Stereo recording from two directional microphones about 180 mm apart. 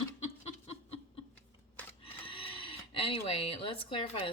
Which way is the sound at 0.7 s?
30° left (ahead or behind).